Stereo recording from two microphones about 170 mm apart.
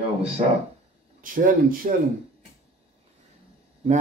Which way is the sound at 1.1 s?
55° right (ahead or behind).